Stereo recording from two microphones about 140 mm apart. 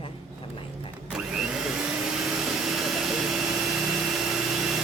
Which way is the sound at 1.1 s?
5° right (ahead or behind).